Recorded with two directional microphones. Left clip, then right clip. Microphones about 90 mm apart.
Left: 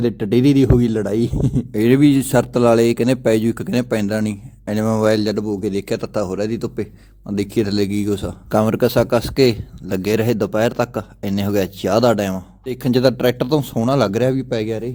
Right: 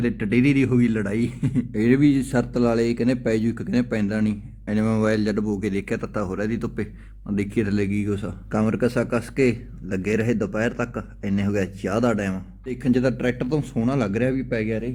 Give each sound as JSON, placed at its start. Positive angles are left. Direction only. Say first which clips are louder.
{"t": 0.0, "sound": "a man's voice", "louder": "left 5 dB", "side_deg": 35}
{"t": 1.7, "sound": "a man's voice", "louder": "left 5 dB", "side_deg": 50}
{"t": 8.4, "sound": "a man's voice", "louder": "left 7 dB", "side_deg": 60}
{"t": 12.6, "sound": "a man's voice", "louder": "left 6 dB", "side_deg": 70}